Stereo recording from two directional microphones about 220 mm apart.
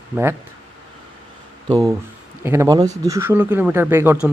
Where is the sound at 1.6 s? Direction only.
15° right (ahead or behind).